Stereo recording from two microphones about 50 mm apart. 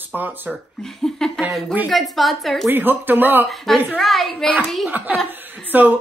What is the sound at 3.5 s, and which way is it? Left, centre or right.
Speech, centre.